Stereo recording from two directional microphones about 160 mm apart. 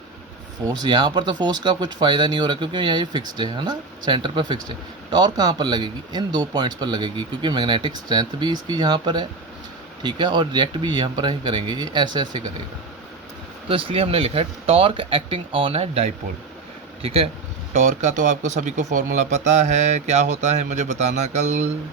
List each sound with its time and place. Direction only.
0.6 s speech: 25° right (ahead or behind)
13.7 s speech: 35° right (ahead or behind)
17.7 s speech: 50° right (ahead or behind)